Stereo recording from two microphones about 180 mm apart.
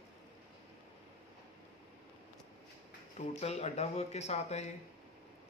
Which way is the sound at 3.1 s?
35° left (ahead or behind).